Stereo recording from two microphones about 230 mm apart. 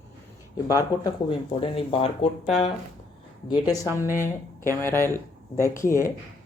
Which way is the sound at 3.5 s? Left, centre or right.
Centre.